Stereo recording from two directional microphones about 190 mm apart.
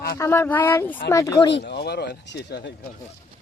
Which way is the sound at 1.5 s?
65° left (ahead or behind).